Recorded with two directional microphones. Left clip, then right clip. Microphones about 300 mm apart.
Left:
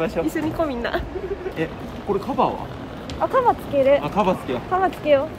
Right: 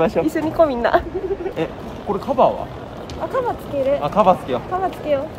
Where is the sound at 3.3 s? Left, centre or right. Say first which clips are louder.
Left 3 dB; left.